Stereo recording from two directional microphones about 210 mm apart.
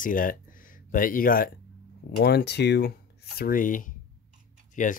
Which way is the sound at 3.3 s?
40° left (ahead or behind).